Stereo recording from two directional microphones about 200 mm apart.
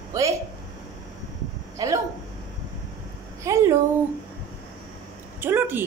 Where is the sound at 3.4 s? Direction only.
15° right (ahead or behind).